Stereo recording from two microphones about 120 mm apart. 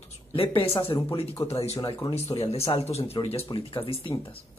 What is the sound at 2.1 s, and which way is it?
Speech, 60° left (ahead or behind).